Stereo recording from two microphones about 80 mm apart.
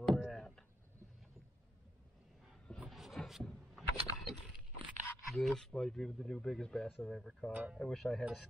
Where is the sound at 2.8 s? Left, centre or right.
Centre.